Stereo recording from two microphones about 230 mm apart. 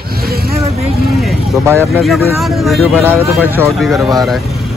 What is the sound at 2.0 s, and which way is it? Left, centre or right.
Speech, centre.